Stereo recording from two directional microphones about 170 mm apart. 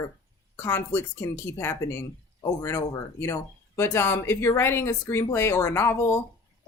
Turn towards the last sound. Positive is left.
turn(degrees=15)  # may be behind; listen again after turning